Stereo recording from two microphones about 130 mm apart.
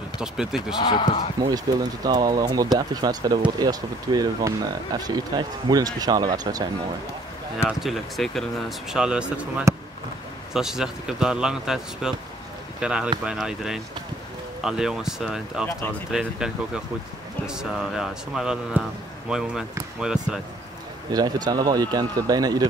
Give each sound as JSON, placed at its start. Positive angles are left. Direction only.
{"t": 0.2, "sound": "speech", "side_deg": -5}
{"t": 0.8, "sound": "speech", "side_deg": 40}
{"t": 1.7, "sound": "speech", "side_deg": -30}
{"t": 7.6, "sound": "speech", "side_deg": 0}
{"t": 21.1, "sound": "speech", "side_deg": -30}